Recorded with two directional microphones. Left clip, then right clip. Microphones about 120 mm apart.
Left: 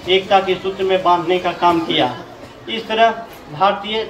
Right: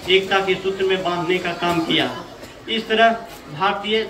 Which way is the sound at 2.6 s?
40° right (ahead or behind).